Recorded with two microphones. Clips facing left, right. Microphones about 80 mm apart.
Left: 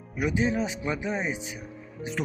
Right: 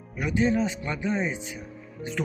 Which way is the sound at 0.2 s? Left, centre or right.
Centre.